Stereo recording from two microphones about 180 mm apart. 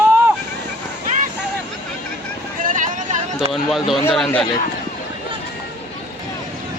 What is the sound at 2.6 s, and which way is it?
Vehicle, 45° right (ahead or behind).